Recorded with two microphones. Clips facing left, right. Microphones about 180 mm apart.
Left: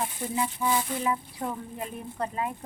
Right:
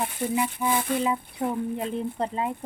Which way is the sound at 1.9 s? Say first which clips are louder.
Right 5 dB; 25° right (ahead or behind).